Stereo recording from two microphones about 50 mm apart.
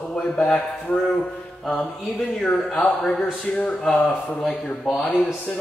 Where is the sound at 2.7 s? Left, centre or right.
Centre.